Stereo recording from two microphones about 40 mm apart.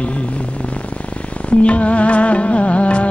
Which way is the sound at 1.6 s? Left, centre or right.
Left.